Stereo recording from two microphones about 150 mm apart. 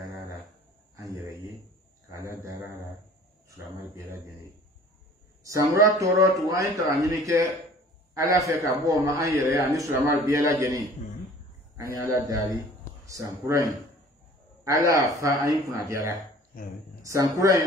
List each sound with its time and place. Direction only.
0.9 s a sound: 25° right (ahead or behind)
2.3 s a man's voice: 20° right (ahead or behind)
5.4 s a man's voice: 20° right (ahead or behind)